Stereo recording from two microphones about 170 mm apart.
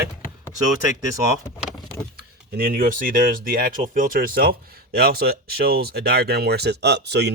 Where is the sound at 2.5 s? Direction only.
65° right (ahead or behind).